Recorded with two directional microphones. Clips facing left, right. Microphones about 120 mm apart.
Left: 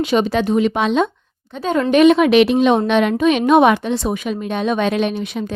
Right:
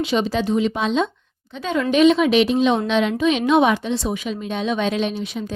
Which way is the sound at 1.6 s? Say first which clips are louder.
Left 3 dB; 45° left (ahead or behind).